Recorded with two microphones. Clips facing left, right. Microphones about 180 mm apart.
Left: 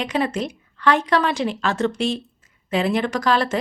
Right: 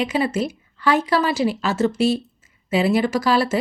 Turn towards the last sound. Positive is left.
turn(degrees=-5)  # may be behind; listen again after turning